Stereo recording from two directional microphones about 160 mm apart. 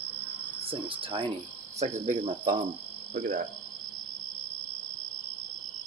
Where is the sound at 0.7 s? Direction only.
35° right (ahead or behind).